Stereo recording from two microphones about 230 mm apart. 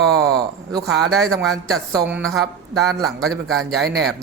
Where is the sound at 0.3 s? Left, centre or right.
Centre.